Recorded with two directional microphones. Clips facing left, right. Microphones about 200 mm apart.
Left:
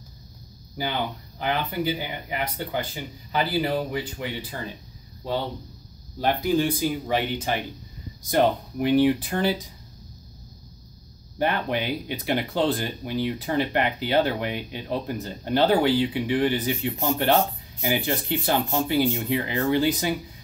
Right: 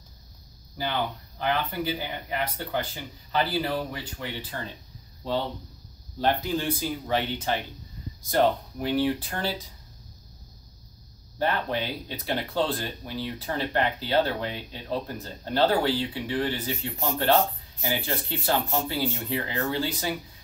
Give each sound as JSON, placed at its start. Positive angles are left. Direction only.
{"t": 0.8, "sound": "speech", "side_deg": 15}
{"t": 11.3, "sound": "speech", "side_deg": 15}